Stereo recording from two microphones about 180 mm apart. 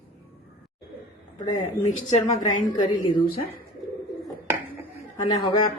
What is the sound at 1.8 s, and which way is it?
Speech, 40° left (ahead or behind).